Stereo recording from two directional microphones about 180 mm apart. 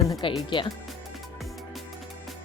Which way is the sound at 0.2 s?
30° left (ahead or behind).